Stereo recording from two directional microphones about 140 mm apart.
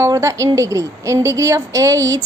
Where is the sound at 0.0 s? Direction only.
20° right (ahead or behind).